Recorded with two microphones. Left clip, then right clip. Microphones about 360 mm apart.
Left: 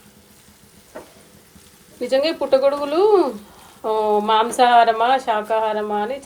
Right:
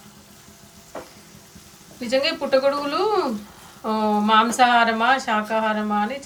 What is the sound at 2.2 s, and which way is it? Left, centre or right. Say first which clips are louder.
Speech: left 3 dB; centre.